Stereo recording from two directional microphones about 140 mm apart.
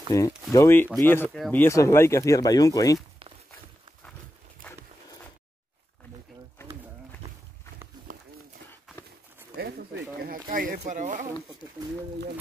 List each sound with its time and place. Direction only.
0.1 s speech: 25° left (ahead or behind)
4.6 s a sound: 10° left (ahead or behind)
8.1 s run: 75° right (ahead or behind)
10.2 s speech: 90° right; by 11.2 s 65° right (ahead or behind)